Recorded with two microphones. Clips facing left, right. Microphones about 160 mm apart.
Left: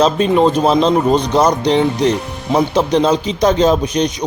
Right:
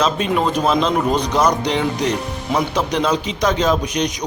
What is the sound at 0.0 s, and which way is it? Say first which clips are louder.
Speech: left 6 dB; 30° left (ahead or behind).